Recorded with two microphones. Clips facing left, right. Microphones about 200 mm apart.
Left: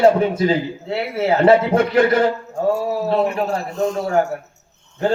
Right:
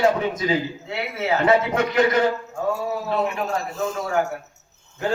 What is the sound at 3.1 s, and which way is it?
A man's voice, 35° left (ahead or behind).